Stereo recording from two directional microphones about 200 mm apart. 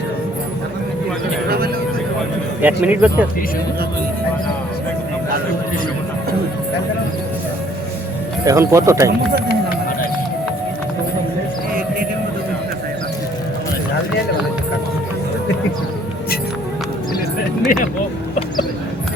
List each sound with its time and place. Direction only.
1.5 s a sound: 50° right (ahead or behind)
2.6 s speech: 10° right (ahead or behind)
8.4 s speech: 15° right (ahead or behind)